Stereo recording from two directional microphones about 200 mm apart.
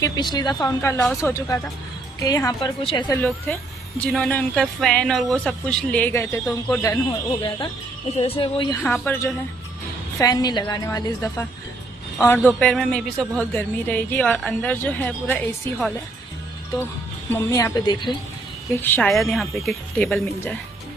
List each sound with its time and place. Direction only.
0.0 s speech: 20° left (ahead or behind)
3.2 s speech: 10° left (ahead or behind)
8.2 s a woman's voice: 25° left (ahead or behind)
8.8 s speech: 10° left (ahead or behind)
17.5 s a woman's voice: 20° left (ahead or behind)
18.8 s speech: 10° left (ahead or behind)